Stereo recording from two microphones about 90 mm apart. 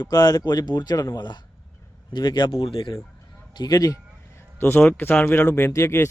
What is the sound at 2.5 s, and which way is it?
Speech, 85° left.